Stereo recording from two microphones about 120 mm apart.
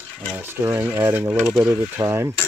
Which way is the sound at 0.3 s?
20° right (ahead or behind).